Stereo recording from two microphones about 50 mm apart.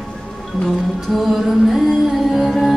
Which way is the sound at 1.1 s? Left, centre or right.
Centre.